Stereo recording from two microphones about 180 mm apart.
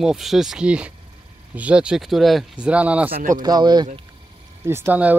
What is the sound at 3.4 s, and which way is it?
Speech, 25° right (ahead or behind).